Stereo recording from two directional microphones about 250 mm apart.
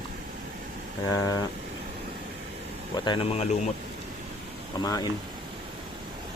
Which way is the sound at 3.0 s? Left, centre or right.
Left.